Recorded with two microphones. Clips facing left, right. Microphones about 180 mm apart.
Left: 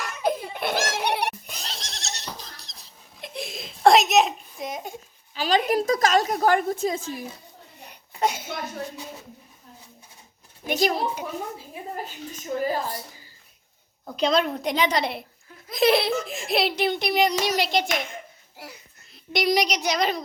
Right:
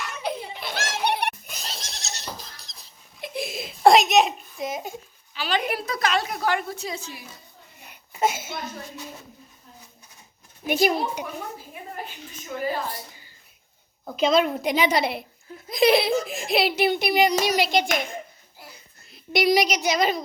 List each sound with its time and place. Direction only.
0.0 s baby laughter: 45° left (ahead or behind)
1.5 s a sound: centre (ahead or behind)
5.3 s a woman's voice: 40° left (ahead or behind)
7.9 s a sound: 5° right (ahead or behind)
10.7 s a child's voice: 10° right (ahead or behind)
12.5 s a woman's voice: 40° left (ahead or behind)
14.0 s a woman's voice: 5° right (ahead or behind)
18.6 s music: 80° left
19.1 s a woman's voice: 5° right (ahead or behind)